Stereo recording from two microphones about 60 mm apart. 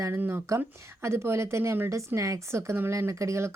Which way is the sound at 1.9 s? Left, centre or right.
Right.